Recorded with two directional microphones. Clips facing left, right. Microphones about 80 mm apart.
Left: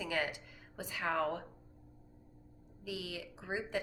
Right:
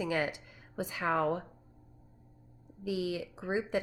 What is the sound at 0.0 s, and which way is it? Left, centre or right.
Speech, right.